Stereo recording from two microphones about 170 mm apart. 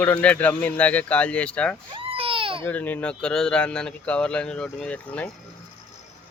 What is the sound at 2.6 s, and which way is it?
A man's voice, 10° left (ahead or behind).